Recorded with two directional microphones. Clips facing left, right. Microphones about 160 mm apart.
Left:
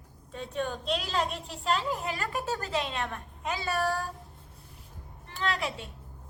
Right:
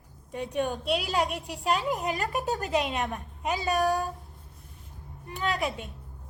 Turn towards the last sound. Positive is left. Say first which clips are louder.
# right 2 dB
turn(degrees=-15)  # may be behind; listen again after turning